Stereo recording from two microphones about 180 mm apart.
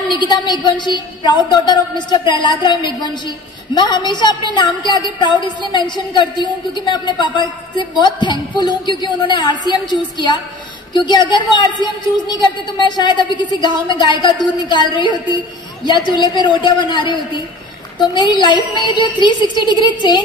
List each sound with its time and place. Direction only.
0.1 s a woman's voice: 25° left (ahead or behind)